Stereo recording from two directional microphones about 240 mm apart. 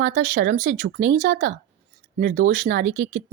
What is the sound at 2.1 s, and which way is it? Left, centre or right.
Speech, right.